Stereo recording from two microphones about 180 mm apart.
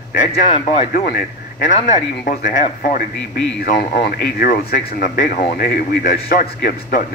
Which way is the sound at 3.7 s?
55° left (ahead or behind).